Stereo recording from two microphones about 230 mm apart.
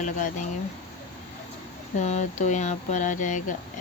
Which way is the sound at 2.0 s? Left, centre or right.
Left.